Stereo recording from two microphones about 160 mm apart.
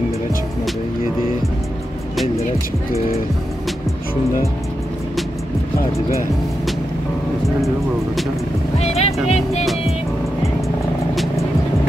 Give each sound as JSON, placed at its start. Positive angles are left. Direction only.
{"t": 8.7, "sound": "speech", "side_deg": 40}